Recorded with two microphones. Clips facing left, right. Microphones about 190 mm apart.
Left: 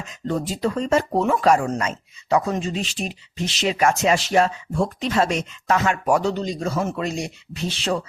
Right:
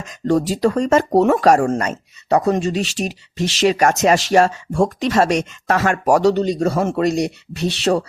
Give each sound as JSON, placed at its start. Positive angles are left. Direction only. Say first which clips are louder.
{"t": 0.3, "sound": "speech", "louder": "right 7 dB", "side_deg": -85}
{"t": 1.2, "sound": "speech", "louder": "right 6 dB", "side_deg": -70}
{"t": 1.6, "sound": "speech", "louder": "right 5 dB", "side_deg": -50}
{"t": 3.8, "sound": "speech", "louder": "even", "side_deg": -40}
{"t": 4.4, "sound": "speech", "louder": "right 5 dB", "side_deg": -85}
{"t": 5.6, "sound": "speech", "louder": "right 3 dB", "side_deg": -60}